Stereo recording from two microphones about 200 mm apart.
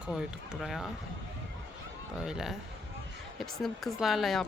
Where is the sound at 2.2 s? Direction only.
5° right (ahead or behind).